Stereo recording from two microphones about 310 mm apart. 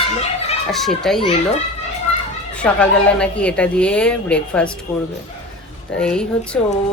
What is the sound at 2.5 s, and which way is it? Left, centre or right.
A woman's voice, centre.